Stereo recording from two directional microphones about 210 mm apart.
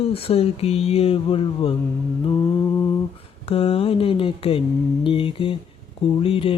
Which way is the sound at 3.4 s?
25° left (ahead or behind).